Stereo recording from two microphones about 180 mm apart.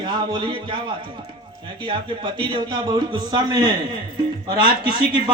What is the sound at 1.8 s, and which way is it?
A man's voice, 25° right (ahead or behind).